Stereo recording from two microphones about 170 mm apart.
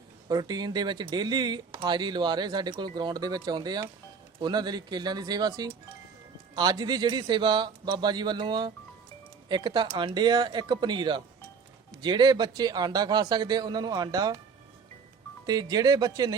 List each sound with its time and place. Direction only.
0.3 s speech: 25° right (ahead or behind)
15.4 s speech: 25° right (ahead or behind)